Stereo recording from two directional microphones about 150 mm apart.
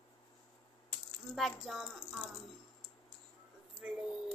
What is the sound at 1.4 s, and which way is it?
Speech, centre (ahead or behind).